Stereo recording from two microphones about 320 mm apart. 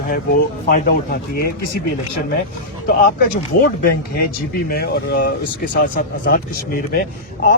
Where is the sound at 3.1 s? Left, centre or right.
Left.